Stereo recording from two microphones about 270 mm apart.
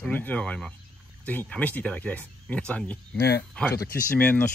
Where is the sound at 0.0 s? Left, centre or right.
Centre.